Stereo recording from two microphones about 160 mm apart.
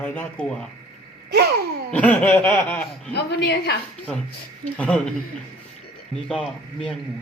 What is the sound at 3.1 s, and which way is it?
Speech, 90° left.